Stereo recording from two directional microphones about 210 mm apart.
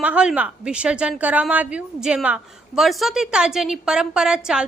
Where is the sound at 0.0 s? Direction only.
5° right (ahead or behind).